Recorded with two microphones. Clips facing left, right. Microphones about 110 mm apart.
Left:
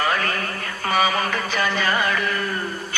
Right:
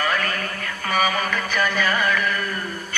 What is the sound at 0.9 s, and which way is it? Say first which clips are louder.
Music: left 1 dB; 30° left (ahead or behind).